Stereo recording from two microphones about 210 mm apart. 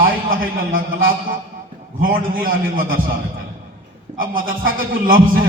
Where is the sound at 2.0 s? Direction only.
40° right (ahead or behind).